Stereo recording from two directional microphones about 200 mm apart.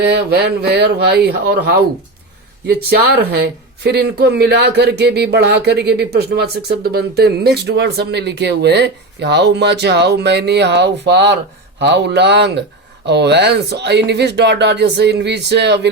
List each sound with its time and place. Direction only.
0.0 s speech: 55° right (ahead or behind)
3.2 s speech: 55° right (ahead or behind)